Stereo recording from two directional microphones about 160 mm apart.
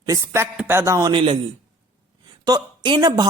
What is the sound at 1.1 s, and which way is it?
Speech, 30° right (ahead or behind).